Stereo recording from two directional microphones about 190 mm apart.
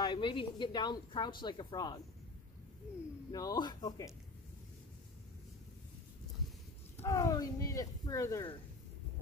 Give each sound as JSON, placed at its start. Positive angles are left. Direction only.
{"t": 0.0, "sound": "a woman's voice", "side_deg": 25}
{"t": 3.3, "sound": "a woman's voice", "side_deg": 20}
{"t": 7.0, "sound": "speech", "side_deg": 15}